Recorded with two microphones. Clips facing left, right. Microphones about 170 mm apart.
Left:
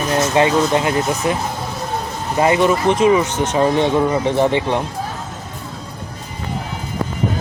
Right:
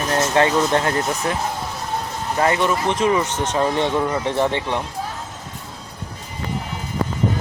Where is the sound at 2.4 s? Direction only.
15° left (ahead or behind).